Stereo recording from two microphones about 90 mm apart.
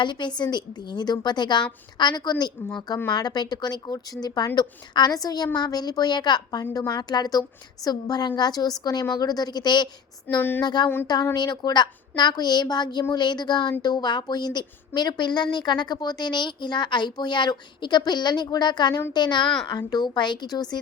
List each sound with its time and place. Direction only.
0.0 s a woman's voice: 60° left (ahead or behind)
10.3 s speech: 20° left (ahead or behind)
10.6 s a woman's voice: 55° left (ahead or behind)